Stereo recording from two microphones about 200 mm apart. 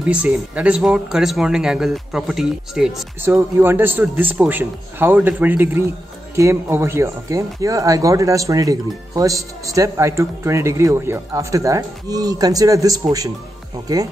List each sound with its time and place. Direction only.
0.0 s speech: 5° right (ahead or behind)